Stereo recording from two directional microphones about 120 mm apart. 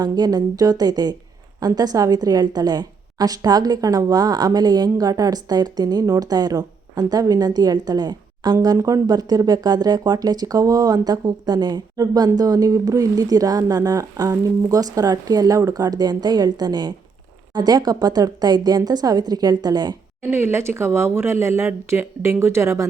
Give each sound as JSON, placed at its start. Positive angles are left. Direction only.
{"t": 0.0, "sound": "a woman's voice", "side_deg": -35}
{"t": 20.3, "sound": "speech", "side_deg": -20}